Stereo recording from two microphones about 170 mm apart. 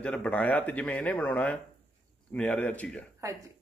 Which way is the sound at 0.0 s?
5° left (ahead or behind).